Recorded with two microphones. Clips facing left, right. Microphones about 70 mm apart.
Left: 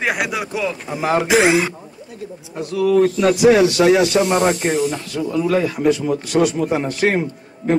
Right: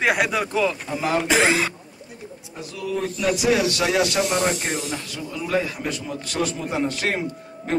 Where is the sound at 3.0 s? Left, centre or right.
Left.